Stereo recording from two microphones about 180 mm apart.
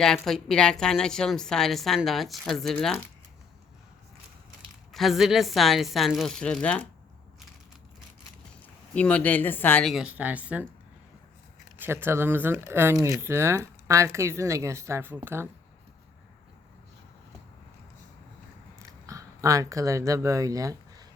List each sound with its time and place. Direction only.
0.0 s a woman's voice: 5° left (ahead or behind)
4.9 s a woman's voice: centre (ahead or behind)
9.0 s a woman's voice: 5° left (ahead or behind)
11.8 s speech: 10° right (ahead or behind)
18.8 s a sound: 20° right (ahead or behind)